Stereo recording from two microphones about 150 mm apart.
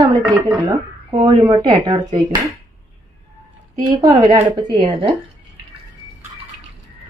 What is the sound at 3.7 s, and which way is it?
Speech, 25° right (ahead or behind).